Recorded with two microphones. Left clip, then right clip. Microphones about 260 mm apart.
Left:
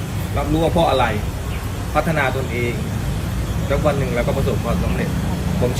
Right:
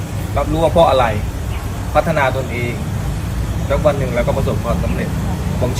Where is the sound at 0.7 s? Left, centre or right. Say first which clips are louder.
Right 7 dB; centre.